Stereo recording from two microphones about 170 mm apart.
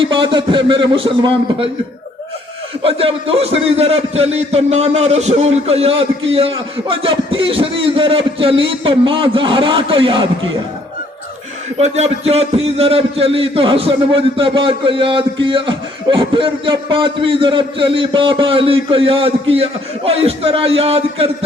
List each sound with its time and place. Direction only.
0.0 s a man's voice: 30° right (ahead or behind)
2.8 s a man's voice: 35° right (ahead or behind)
11.8 s a man's voice: 40° right (ahead or behind)